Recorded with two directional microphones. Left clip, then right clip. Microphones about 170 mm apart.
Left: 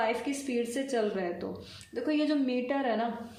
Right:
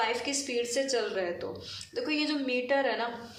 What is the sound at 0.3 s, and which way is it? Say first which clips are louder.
A woman's voice: right 1 dB; 55° left (ahead or behind).